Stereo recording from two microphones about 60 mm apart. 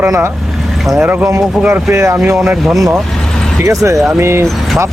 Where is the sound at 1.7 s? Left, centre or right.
Right.